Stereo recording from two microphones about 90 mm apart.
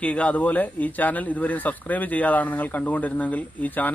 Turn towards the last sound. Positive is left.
turn(degrees=20)  # may be behind; listen again after turning